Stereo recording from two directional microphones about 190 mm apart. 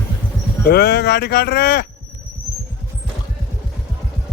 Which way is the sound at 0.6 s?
60° left (ahead or behind).